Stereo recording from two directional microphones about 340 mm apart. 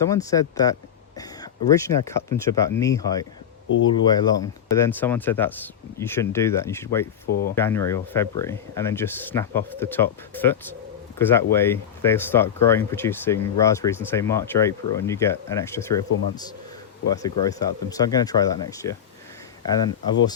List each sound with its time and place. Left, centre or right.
0.0 s speech: centre
7.3 s speech: left
7.5 s speech: centre
17.2 s speech: centre